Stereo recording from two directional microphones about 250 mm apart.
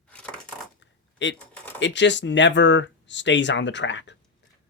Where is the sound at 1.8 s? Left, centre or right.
Left.